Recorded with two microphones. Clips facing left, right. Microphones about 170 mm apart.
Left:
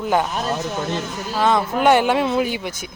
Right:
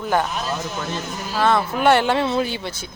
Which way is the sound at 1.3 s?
15° left (ahead or behind).